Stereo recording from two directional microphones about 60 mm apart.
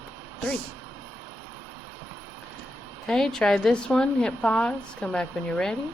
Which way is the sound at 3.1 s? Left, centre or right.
Centre.